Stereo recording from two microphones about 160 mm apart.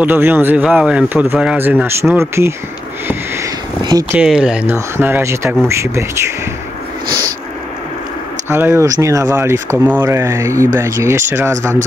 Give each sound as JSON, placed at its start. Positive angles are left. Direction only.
{"t": 0.0, "sound": "speech", "side_deg": -10}
{"t": 4.1, "sound": "speech", "side_deg": -5}
{"t": 8.5, "sound": "speech", "side_deg": -15}